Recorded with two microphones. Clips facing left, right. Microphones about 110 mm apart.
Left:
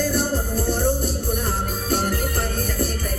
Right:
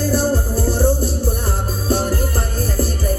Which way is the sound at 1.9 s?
30° right (ahead or behind).